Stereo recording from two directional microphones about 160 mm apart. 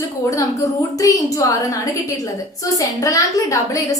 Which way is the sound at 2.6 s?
20° left (ahead or behind).